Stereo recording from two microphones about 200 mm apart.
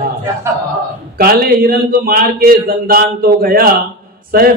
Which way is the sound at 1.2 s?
45° right (ahead or behind).